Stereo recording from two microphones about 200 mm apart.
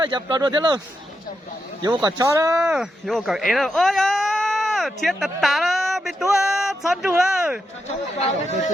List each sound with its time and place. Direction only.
0.0 s speech: 20° right (ahead or behind)
1.8 s speech: 20° right (ahead or behind)
2.7 s speech: centre (ahead or behind)
8.2 s speech: 35° left (ahead or behind)